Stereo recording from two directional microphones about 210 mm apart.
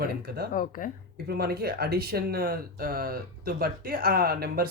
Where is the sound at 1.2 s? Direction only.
50° right (ahead or behind).